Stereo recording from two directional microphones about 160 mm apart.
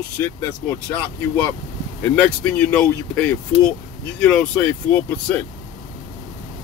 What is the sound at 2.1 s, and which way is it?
Speech, 10° left (ahead or behind).